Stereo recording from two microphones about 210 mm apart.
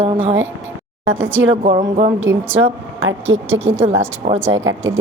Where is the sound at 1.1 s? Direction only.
10° right (ahead or behind).